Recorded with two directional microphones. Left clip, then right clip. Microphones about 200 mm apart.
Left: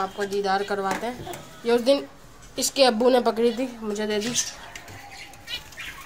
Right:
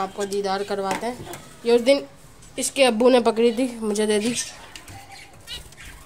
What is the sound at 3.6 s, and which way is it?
Speech, 35° right (ahead or behind).